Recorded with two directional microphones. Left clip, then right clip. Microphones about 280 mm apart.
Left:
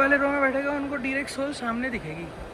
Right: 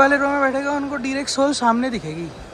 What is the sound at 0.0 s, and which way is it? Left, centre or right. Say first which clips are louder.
Speech: right 5 dB; centre.